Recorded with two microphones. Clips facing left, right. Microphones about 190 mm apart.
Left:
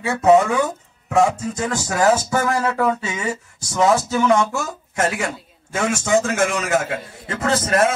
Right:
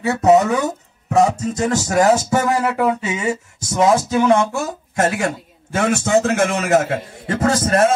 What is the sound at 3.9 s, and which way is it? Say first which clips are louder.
Speech: right 2 dB; 25° right (ahead or behind).